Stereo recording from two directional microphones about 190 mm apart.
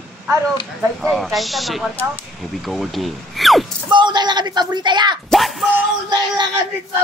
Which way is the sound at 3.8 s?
25° right (ahead or behind).